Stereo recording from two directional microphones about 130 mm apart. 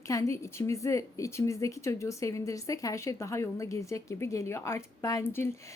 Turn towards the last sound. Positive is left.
turn(degrees=20)  # may be behind; listen again after turning